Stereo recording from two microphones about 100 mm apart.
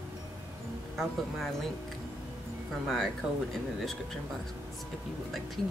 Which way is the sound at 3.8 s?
5° left (ahead or behind).